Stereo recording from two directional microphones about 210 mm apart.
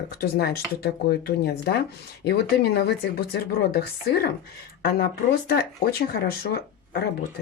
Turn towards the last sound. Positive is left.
turn(degrees=50)  # may be behind; listen again after turning